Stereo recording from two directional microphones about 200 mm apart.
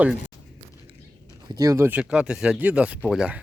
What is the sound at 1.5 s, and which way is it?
Speech, 15° right (ahead or behind).